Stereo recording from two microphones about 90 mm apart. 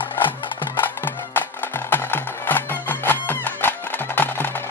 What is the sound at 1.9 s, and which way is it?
Music, 20° left (ahead or behind).